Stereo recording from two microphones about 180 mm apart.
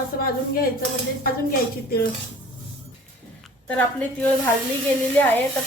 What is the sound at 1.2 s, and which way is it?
Speech, 55° left (ahead or behind).